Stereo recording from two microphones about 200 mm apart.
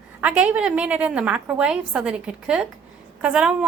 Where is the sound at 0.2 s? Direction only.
5° right (ahead or behind).